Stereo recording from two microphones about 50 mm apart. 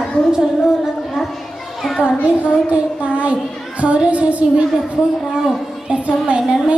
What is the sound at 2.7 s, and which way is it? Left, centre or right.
A woman's voice, right.